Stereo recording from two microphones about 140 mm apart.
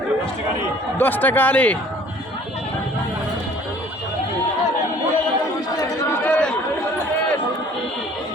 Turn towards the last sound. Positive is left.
turn(degrees=10)  # may be behind; listen again after turning